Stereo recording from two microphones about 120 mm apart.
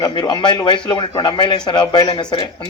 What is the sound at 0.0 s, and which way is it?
A man's voice, 40° left (ahead or behind).